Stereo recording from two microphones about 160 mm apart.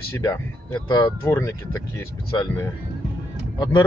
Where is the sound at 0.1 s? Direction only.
15° left (ahead or behind).